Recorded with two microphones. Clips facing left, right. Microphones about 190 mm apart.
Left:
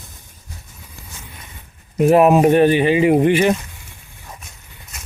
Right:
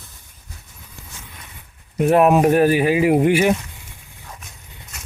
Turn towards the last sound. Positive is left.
turn(degrees=-10)  # may be behind; listen again after turning